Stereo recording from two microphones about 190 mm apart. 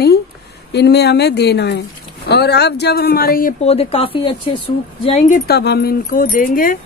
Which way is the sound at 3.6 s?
35° left (ahead or behind).